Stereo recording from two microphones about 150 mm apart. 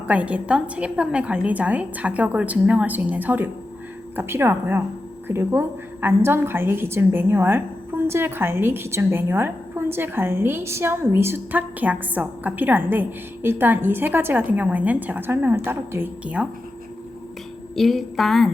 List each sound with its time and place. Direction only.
0.1 s a woman's voice: 10° right (ahead or behind)
17.7 s a woman's voice: centre (ahead or behind)